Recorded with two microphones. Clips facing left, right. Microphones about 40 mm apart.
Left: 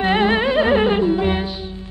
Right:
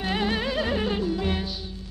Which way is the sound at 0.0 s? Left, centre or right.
Left.